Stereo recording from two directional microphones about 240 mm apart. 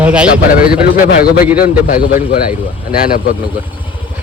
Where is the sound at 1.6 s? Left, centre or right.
Left.